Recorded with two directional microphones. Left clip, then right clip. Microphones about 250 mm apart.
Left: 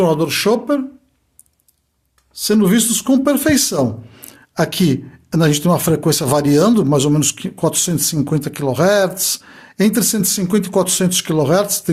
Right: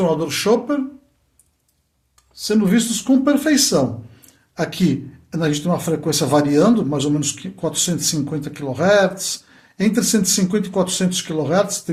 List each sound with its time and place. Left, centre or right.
0.0 s beatboxing: left
2.3 s speech: left